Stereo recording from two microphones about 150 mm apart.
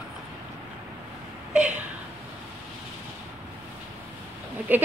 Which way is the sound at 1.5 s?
10° right (ahead or behind).